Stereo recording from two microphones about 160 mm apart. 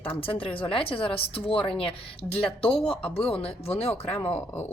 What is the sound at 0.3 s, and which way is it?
A woman's voice, 35° left (ahead or behind).